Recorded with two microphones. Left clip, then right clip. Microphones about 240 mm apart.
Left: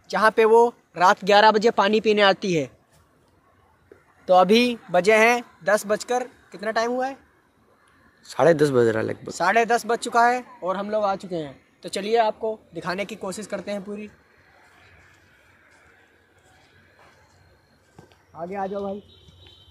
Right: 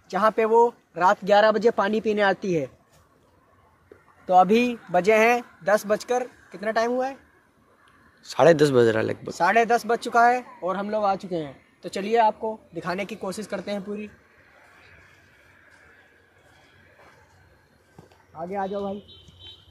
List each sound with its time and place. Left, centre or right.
0.1 s speech: left
4.3 s speech: left
4.9 s speech: centre
8.2 s speech: centre
18.5 s speech: centre